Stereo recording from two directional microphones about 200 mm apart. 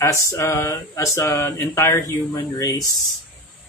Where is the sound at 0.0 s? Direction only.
15° left (ahead or behind).